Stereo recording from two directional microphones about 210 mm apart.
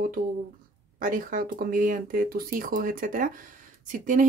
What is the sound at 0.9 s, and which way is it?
Speech, 40° right (ahead or behind).